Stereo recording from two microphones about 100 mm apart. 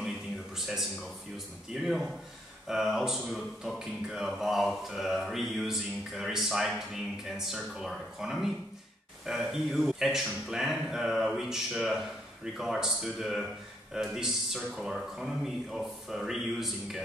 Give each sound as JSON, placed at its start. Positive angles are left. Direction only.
{"t": 1.7, "sound": "speech", "side_deg": 0}